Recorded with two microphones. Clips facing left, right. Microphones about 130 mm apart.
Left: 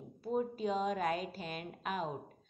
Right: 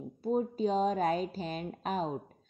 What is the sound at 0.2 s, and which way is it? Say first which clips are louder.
A woman's voice: right 5 dB; 30° right (ahead or behind).